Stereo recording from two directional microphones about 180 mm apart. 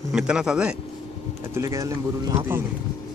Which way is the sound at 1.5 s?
15° right (ahead or behind).